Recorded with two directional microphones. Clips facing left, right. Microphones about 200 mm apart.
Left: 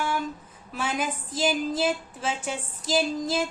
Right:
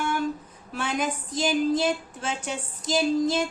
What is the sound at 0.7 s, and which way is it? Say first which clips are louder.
Speech: right 1 dB; 5° left (ahead or behind).